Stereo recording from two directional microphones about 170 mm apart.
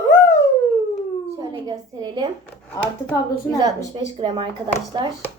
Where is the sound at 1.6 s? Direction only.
25° right (ahead or behind).